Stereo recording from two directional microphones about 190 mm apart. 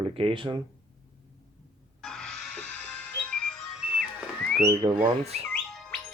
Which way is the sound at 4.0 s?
5° left (ahead or behind).